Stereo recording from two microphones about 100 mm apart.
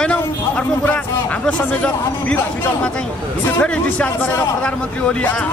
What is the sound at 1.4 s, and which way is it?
Speech, 10° left (ahead or behind).